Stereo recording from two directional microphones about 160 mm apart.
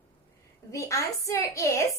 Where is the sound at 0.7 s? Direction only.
20° left (ahead or behind).